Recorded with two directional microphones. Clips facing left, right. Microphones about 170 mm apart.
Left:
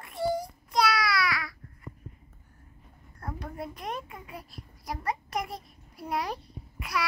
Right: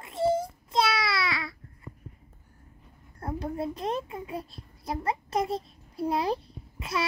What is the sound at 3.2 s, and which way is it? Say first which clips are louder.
A child's voice: right 6 dB; 25° right (ahead or behind).